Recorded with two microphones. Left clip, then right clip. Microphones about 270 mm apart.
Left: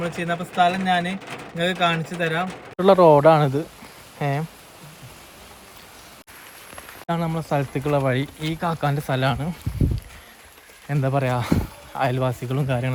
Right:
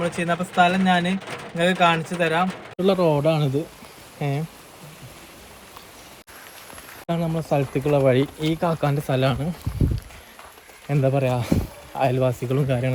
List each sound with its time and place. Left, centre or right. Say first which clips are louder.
0.0 s speech: right 2 dB; centre
2.7 s speech: left 5 dB; centre
3.0 s speech: left 9 dB; left
3.2 s speech: left 6 dB; centre
7.1 s speech: right 1 dB; centre
10.8 s speech: right 2 dB; centre